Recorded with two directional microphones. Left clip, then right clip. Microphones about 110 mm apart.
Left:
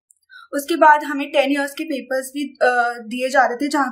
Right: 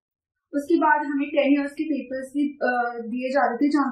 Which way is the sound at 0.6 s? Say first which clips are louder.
Left 7 dB; 20° left (ahead or behind).